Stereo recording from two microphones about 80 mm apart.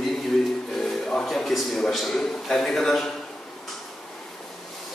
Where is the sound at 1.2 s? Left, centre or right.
Centre.